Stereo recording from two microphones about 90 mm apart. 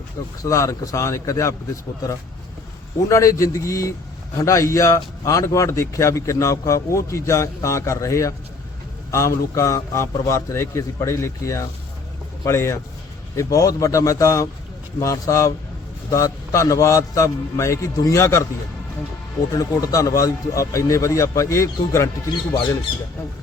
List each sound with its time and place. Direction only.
0.4 s a man's voice: 35° left (ahead or behind)
19.5 s a man's voice: 40° left (ahead or behind)